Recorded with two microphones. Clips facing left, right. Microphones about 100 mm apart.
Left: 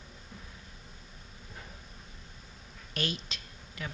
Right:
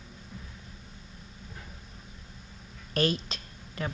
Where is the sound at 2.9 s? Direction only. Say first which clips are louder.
Right 8 dB; 40° right (ahead or behind).